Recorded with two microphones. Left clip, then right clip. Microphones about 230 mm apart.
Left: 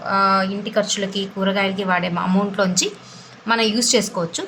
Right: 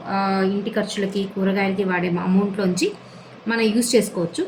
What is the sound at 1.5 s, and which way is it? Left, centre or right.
Speech, left.